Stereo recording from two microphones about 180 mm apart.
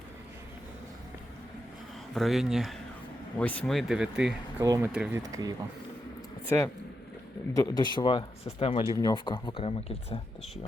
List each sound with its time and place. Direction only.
2.1 s speech: centre (ahead or behind)
4.6 s speech: 20° right (ahead or behind)
4.9 s speech: 5° right (ahead or behind)
5.3 s speech: 20° right (ahead or behind)
6.5 s speech: 15° left (ahead or behind); by 10.2 s 35° left (ahead or behind)